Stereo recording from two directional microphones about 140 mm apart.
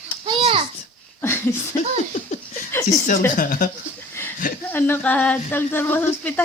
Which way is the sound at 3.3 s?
75° left (ahead or behind).